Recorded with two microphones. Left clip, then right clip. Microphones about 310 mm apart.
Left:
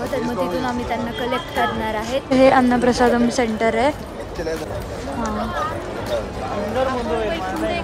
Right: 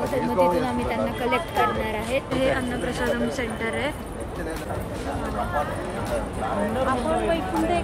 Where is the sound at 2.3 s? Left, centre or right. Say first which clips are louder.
Left 14 dB; centre.